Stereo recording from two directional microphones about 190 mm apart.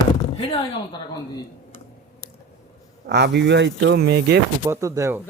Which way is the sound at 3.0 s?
60° right (ahead or behind).